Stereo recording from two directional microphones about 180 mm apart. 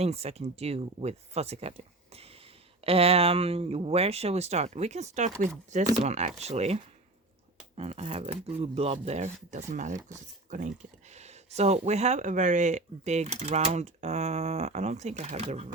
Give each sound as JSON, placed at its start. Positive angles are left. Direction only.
{"t": 0.0, "sound": "speech", "side_deg": -35}